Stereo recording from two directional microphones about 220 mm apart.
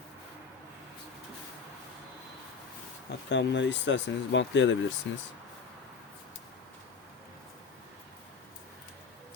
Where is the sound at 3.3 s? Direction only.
55° left (ahead or behind).